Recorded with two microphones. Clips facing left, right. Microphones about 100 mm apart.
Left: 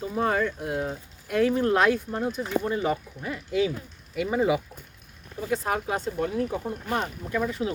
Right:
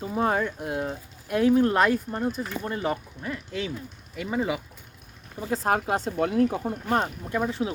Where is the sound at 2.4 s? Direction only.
15° left (ahead or behind).